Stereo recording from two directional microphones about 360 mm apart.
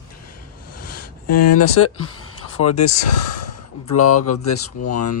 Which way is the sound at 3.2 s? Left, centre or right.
Left.